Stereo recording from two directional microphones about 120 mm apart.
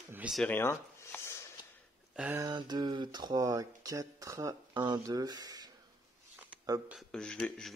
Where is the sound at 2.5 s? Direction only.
40° right (ahead or behind).